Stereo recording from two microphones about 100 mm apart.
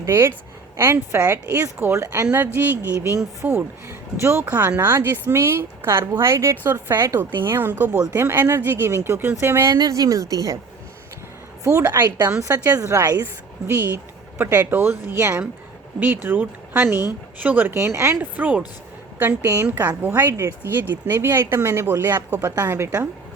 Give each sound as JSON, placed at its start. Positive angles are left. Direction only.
{"t": 0.0, "sound": "speech", "side_deg": -25}
{"t": 9.7, "sound": "a woman's voice", "side_deg": -40}
{"t": 11.6, "sound": "a woman's voice", "side_deg": -30}
{"t": 19.4, "sound": "speech", "side_deg": -30}